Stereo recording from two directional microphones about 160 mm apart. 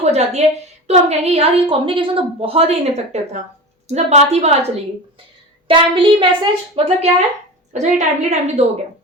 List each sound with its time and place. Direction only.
0.0 s a woman's voice: 40° right (ahead or behind)